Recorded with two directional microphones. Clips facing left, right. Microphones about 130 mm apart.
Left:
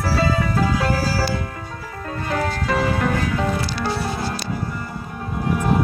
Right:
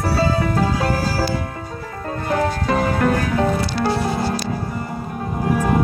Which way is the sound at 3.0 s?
50° right (ahead or behind).